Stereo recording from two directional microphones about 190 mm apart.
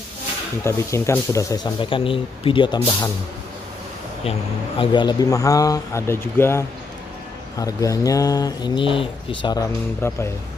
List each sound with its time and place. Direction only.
0.7 s speech: 15° left (ahead or behind)
4.2 s speech: 30° left (ahead or behind)